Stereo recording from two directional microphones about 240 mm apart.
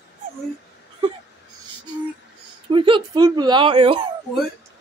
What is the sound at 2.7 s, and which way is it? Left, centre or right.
Speech, right.